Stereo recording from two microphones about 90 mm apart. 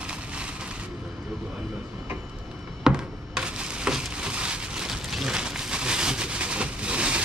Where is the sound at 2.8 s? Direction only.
10° right (ahead or behind).